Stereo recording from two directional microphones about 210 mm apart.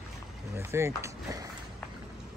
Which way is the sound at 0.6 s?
10° right (ahead or behind).